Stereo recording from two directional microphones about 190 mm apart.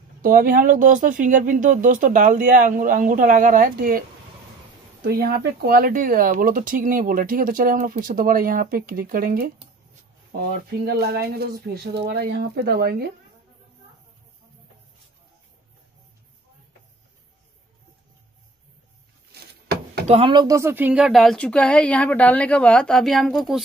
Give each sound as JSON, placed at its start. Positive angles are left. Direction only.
{"t": 0.2, "sound": "speech", "side_deg": -45}
{"t": 5.0, "sound": "speech", "side_deg": -55}
{"t": 10.9, "sound": "speech", "side_deg": -60}
{"t": 20.1, "sound": "speech", "side_deg": -30}